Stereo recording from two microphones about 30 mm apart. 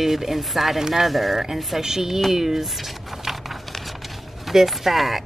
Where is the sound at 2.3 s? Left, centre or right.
Centre.